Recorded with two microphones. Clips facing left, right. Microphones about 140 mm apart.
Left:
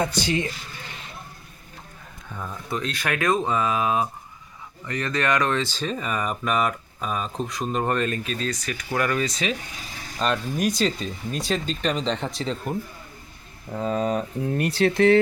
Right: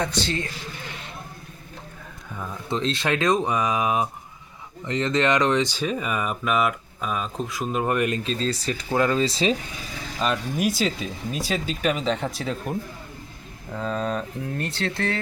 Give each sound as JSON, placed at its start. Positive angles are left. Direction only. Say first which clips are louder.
{"t": 0.0, "sound": "speech", "louder": "left 2 dB", "side_deg": 10}
{"t": 2.6, "sound": "speech", "louder": "right 4 dB", "side_deg": -25}
{"t": 8.2, "sound": "speech", "louder": "right 3 dB", "side_deg": -30}
{"t": 10.2, "sound": "speech", "louder": "even", "side_deg": -5}
{"t": 13.7, "sound": "speech", "louder": "left 3 dB", "side_deg": 10}